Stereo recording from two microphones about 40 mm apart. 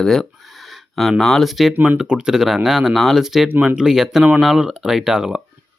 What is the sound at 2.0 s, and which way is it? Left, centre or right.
Speech, right.